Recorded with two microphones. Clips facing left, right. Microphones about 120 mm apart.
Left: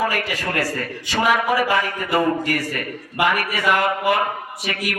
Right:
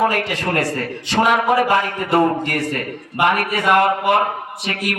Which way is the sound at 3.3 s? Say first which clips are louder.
Right 3 dB; 55° right (ahead or behind).